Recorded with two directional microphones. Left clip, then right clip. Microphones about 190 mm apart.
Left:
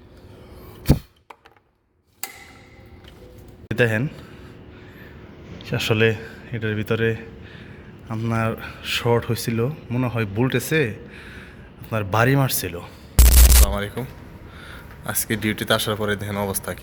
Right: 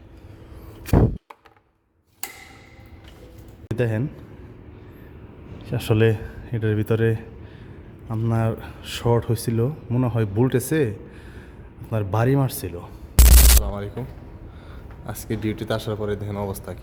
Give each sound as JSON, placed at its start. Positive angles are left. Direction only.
{"t": 3.7, "sound": "a man's voice", "side_deg": -5}
{"t": 5.5, "sound": "speech", "side_deg": -15}